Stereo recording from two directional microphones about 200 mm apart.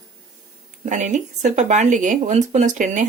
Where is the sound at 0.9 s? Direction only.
40° right (ahead or behind).